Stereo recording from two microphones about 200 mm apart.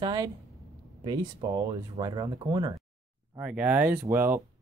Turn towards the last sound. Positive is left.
turn(degrees=-10)  # may be behind; listen again after turning